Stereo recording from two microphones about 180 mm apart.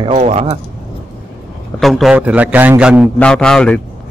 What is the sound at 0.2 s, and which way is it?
Speech, 35° right (ahead or behind).